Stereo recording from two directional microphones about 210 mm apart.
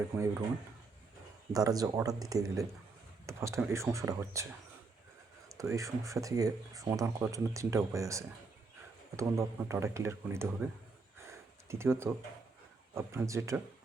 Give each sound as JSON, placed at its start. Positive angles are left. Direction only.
{"t": 1.5, "sound": "speech", "side_deg": -15}
{"t": 5.5, "sound": "speech", "side_deg": -15}
{"t": 11.2, "sound": "a sound", "side_deg": -10}
{"t": 12.9, "sound": "speech", "side_deg": -10}